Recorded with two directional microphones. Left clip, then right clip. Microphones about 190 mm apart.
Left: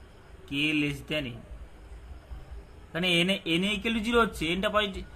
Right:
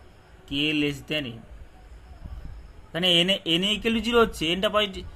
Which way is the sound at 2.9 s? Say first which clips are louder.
Right 5 dB; 40° right (ahead or behind).